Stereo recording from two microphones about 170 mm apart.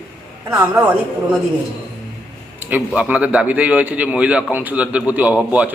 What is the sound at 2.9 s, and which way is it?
A man's voice, 5° right (ahead or behind).